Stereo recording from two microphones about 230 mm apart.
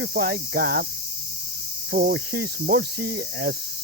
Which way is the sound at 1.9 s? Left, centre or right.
Right.